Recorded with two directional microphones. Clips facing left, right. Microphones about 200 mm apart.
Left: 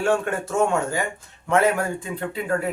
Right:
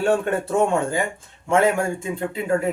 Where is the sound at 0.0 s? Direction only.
35° right (ahead or behind).